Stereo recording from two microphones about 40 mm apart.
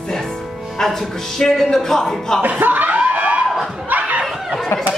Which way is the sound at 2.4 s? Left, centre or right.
Right.